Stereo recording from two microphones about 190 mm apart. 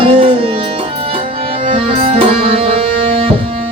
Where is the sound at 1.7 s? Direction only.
30° right (ahead or behind).